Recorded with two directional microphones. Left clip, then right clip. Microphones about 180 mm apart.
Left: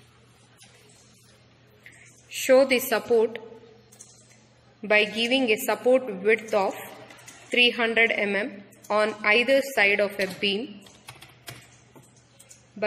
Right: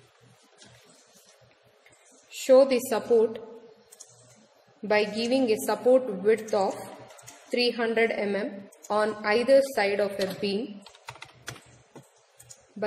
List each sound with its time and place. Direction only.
2.4 s a woman's voice: 15° left (ahead or behind)
4.8 s a woman's voice: 10° left (ahead or behind)